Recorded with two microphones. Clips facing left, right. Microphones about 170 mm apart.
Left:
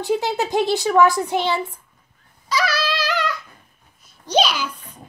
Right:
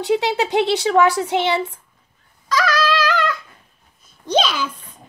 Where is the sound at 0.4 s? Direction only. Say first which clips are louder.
Right 2 dB; 70° right (ahead or behind).